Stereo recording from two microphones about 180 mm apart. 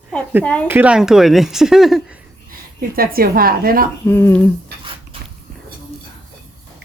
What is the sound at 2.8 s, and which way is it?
A woman's voice, 55° right (ahead or behind).